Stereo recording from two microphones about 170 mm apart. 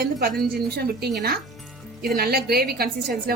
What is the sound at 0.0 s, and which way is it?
A woman's voice, 60° right (ahead or behind).